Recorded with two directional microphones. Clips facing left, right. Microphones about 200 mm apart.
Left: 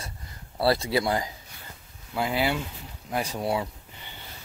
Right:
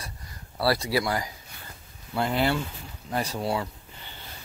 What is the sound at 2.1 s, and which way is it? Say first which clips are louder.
Speech: right 1 dB; 5° left (ahead or behind).